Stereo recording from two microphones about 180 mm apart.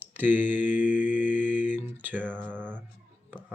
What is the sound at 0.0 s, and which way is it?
Mantra, 10° right (ahead or behind).